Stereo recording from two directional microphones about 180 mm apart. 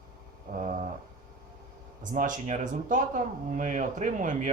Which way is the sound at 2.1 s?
45° right (ahead or behind).